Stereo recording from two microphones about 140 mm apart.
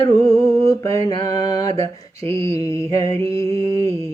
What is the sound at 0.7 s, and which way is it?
Mantra, 20° left (ahead or behind).